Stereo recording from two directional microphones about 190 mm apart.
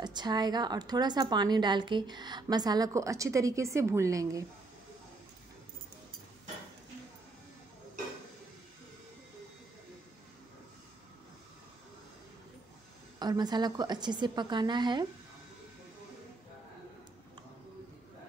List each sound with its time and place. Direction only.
0.0 s a woman's voice: 20° right (ahead or behind)
13.2 s a woman's voice: 20° right (ahead or behind)